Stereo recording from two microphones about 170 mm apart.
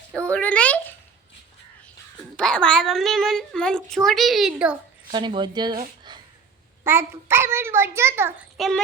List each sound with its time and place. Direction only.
0.1 s a sound: 5° left (ahead or behind)
2.3 s speech: 5° left (ahead or behind)
5.1 s speech: 25° right (ahead or behind)
6.8 s a child's voice: 15° right (ahead or behind)
8.5 s speech: centre (ahead or behind)